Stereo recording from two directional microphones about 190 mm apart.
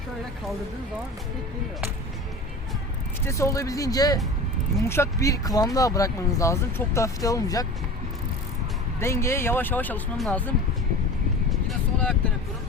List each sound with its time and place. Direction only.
3.2 s speech: 15° left (ahead or behind)
9.0 s speech: 15° left (ahead or behind)